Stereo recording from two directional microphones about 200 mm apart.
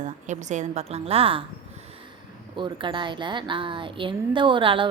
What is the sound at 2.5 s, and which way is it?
Speech, 25° right (ahead or behind).